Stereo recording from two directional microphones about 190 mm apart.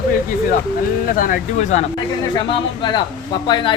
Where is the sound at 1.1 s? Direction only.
45° left (ahead or behind).